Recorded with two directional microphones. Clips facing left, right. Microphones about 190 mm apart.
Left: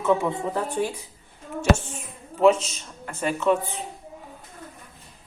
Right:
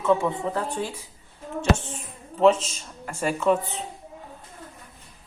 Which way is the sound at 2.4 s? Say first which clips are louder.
Even; 5° left (ahead or behind).